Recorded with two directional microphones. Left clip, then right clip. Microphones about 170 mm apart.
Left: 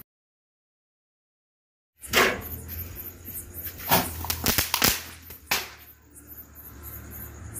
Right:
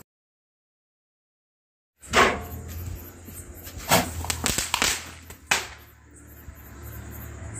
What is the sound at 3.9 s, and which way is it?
Walk, 5° right (ahead or behind).